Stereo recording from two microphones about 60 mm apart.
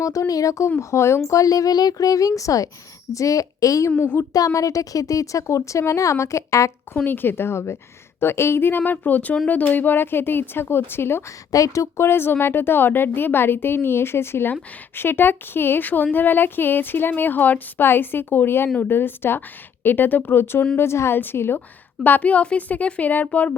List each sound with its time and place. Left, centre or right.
0.0 s a woman's voice: left
0.8 s speech: left
1.3 s a woman's voice: left
7.0 s a woman's voice: left
11.5 s a woman's voice: left
12.0 s a woman's voice: left
22.0 s a woman's voice: left